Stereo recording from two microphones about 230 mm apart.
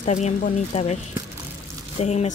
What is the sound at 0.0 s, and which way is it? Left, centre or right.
Speech, left.